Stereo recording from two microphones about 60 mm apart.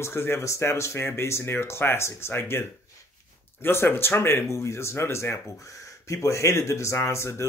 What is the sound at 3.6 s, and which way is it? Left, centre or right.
Speech, left.